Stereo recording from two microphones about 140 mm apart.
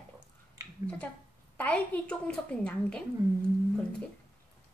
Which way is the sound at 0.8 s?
10° left (ahead or behind).